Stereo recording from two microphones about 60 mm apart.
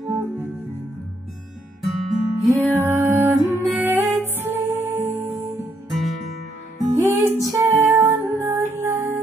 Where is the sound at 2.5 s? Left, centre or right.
Right.